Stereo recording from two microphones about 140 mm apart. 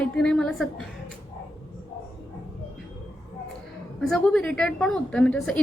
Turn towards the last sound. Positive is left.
turn(degrees=5)  # may be behind; listen again after turning